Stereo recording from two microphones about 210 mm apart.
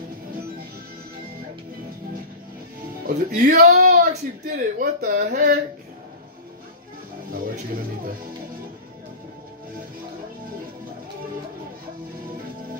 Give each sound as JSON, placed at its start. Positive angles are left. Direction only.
{"t": 3.1, "sound": "speech", "side_deg": -45}
{"t": 3.6, "sound": "speech", "side_deg": -35}
{"t": 7.3, "sound": "a sound", "side_deg": -45}